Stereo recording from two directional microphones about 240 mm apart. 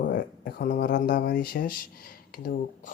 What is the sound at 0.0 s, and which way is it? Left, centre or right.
Speech, left.